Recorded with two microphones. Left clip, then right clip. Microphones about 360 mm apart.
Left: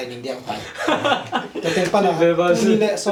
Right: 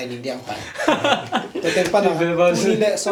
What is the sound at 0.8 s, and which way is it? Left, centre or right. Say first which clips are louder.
Speech: right 1 dB; right.